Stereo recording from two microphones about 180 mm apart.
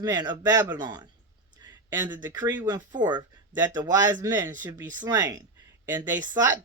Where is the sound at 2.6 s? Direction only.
20° right (ahead or behind).